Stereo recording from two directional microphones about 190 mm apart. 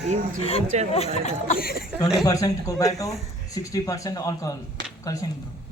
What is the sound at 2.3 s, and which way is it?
Speech, 20° left (ahead or behind).